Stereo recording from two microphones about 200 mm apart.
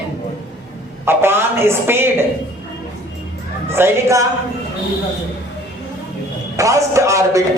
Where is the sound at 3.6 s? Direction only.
10° right (ahead or behind).